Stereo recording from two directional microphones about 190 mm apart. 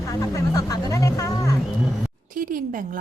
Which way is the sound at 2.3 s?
45° right (ahead or behind).